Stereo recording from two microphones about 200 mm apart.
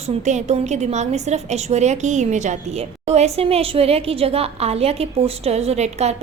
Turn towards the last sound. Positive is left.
turn(degrees=-35)  # may be behind; listen again after turning